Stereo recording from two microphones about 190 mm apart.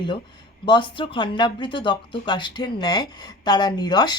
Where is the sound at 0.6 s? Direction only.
25° left (ahead or behind).